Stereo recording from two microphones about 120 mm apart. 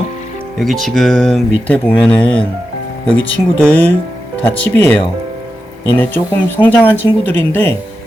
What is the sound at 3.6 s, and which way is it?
Speech, 10° left (ahead or behind).